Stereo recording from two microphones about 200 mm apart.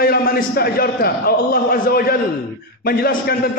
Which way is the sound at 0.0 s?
50° left (ahead or behind).